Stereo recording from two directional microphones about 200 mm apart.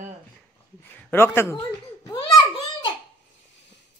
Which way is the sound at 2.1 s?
25° left (ahead or behind).